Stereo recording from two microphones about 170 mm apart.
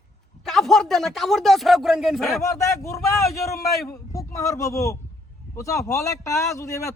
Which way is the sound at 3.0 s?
Centre (ahead or behind).